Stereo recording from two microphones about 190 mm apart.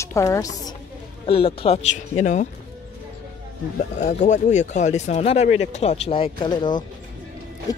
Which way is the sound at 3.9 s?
40° left (ahead or behind).